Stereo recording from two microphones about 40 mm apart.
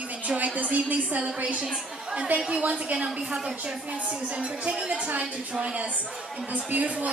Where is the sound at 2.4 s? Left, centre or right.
Right.